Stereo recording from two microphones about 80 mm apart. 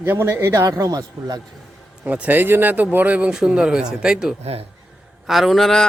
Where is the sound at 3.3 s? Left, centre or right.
Centre.